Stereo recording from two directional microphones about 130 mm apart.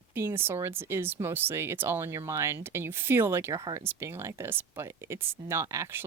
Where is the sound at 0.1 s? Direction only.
15° right (ahead or behind).